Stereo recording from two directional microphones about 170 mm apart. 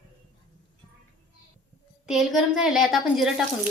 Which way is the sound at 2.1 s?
Centre (ahead or behind).